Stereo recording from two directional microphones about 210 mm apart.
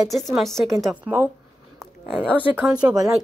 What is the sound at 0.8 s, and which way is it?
Speech, 10° right (ahead or behind).